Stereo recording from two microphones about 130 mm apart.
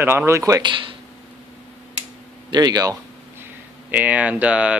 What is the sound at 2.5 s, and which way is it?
Speech, 30° right (ahead or behind).